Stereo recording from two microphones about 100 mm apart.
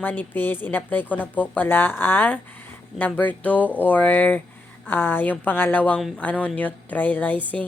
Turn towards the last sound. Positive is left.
turn(degrees=15)  # may be behind; listen again after turning